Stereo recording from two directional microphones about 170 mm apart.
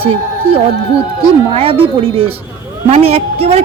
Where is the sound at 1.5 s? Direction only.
35° right (ahead or behind).